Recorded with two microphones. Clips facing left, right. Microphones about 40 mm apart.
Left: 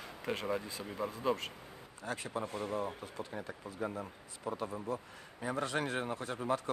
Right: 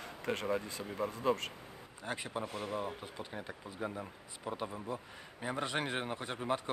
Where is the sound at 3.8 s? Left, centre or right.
Centre.